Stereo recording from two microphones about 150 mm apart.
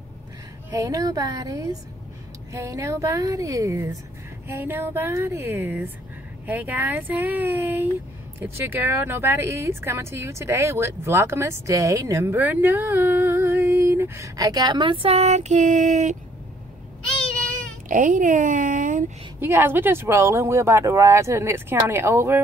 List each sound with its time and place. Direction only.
0.7 s a woman's voice: 20° right (ahead or behind); by 16.2 s 55° right (ahead or behind)
17.8 s speech: 60° right (ahead or behind)
19.4 s speech: 15° right (ahead or behind)